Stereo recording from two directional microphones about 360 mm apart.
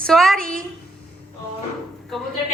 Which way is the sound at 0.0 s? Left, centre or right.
Centre.